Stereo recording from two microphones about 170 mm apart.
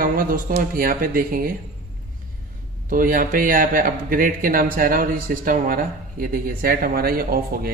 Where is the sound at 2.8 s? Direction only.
55° right (ahead or behind).